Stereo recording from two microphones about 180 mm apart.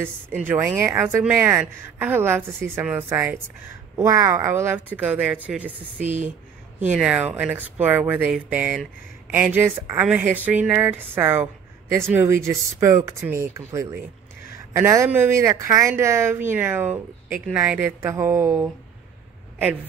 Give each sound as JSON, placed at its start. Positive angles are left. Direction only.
{"t": 0.0, "sound": "a woman's voice", "side_deg": -10}
{"t": 5.9, "sound": "speech", "side_deg": -40}
{"t": 6.8, "sound": "a woman's voice", "side_deg": -10}